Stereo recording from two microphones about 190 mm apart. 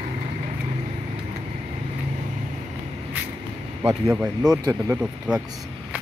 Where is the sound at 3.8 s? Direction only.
10° right (ahead or behind).